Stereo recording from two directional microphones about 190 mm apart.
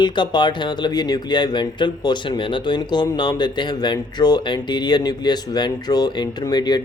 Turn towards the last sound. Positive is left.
turn(degrees=20)  # may be behind; listen again after turning